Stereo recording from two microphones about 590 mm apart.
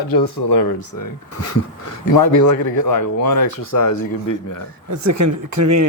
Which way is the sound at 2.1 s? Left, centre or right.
Left.